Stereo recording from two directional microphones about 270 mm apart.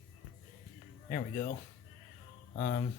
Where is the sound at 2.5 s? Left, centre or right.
Left.